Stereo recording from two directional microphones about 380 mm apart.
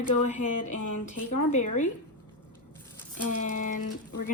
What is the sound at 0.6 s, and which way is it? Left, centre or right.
Speech, left.